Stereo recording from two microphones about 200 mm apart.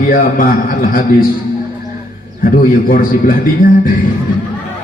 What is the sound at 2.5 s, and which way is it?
Speech, 45° left (ahead or behind).